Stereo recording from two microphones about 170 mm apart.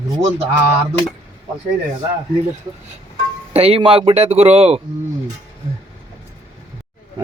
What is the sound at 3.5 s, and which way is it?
Speech, 35° right (ahead or behind).